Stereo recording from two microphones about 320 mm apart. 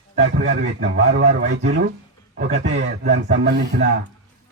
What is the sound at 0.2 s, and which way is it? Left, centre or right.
Speech, right.